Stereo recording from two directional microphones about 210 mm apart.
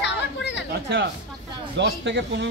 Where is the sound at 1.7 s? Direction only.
55° right (ahead or behind).